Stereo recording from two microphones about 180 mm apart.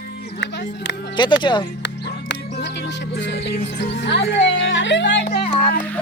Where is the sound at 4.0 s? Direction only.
80° left.